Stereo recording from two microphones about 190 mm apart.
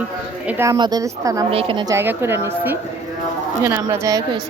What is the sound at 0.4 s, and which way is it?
A woman's voice, 15° right (ahead or behind).